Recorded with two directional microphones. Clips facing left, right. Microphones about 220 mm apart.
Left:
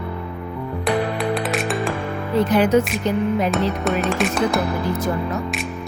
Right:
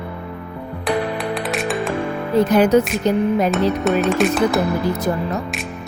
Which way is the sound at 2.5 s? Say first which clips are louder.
Right 2 dB; 40° right (ahead or behind).